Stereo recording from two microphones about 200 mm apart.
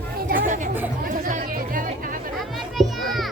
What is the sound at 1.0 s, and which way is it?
Music, 40° right (ahead or behind).